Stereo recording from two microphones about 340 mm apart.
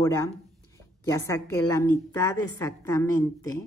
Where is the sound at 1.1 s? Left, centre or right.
Centre.